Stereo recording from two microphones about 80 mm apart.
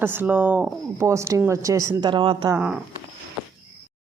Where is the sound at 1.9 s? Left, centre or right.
Right.